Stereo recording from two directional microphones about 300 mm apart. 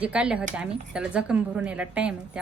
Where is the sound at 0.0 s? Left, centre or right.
Centre.